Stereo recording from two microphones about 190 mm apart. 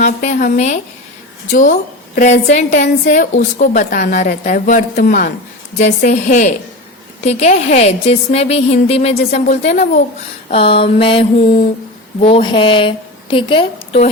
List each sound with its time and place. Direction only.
0.0 s a woman's voice: 40° left (ahead or behind)
2.1 s a woman's voice: 40° left (ahead or behind)
10.5 s a sound: 30° left (ahead or behind)